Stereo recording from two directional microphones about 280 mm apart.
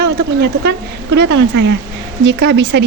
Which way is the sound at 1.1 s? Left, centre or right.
Right.